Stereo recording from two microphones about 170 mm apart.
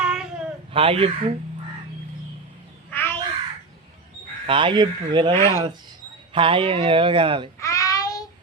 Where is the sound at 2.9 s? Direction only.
10° left (ahead or behind).